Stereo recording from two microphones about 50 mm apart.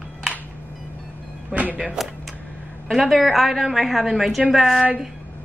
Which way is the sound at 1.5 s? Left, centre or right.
Right.